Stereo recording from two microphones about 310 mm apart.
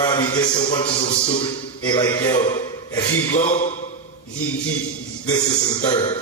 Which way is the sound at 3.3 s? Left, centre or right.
Left.